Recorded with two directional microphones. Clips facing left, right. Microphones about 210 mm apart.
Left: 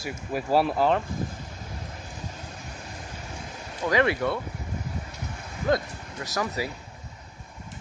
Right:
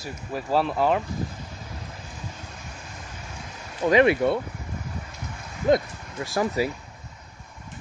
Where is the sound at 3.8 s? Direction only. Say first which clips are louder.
Right 5 dB; 20° right (ahead or behind).